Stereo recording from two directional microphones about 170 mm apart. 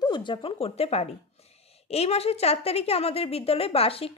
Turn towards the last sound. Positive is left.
turn(degrees=35)  # may be behind; listen again after turning